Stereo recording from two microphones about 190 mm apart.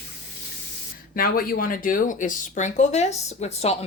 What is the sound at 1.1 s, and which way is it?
Speech, 50° left (ahead or behind).